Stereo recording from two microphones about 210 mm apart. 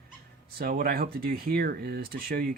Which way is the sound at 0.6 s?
45° right (ahead or behind).